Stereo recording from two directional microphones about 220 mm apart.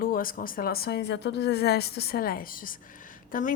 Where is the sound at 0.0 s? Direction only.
40° left (ahead or behind).